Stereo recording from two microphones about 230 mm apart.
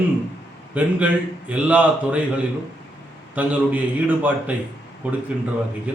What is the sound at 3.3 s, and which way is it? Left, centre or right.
A man's voice, centre.